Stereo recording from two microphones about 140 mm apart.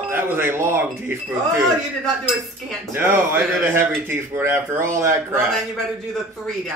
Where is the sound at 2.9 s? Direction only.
15° right (ahead or behind).